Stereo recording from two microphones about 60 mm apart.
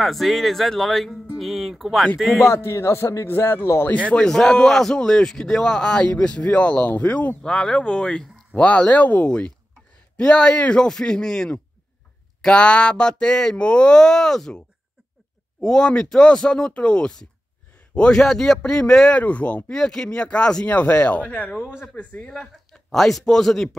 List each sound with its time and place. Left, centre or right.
0.0 s a man's voice: centre
2.4 s speech: left
3.3 s a man's voice: left
4.3 s a man's voice: centre; by 7.3 s left
7.4 s a man's voice: centre
15.6 s a man's voice: centre
18.2 s a man's voice: centre
19.1 s speech: left
22.2 s a man's voice: centre